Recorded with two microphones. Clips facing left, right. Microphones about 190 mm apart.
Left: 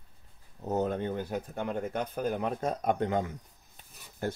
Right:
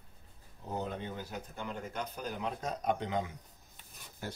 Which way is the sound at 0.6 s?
45° left (ahead or behind).